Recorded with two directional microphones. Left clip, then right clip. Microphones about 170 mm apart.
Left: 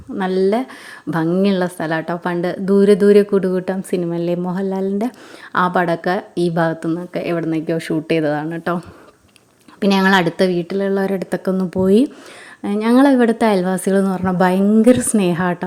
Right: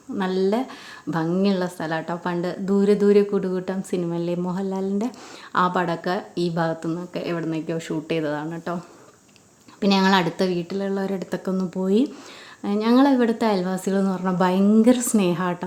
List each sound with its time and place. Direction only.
0.2 s a woman's voice: 25° left (ahead or behind)
9.8 s a woman's voice: 25° left (ahead or behind)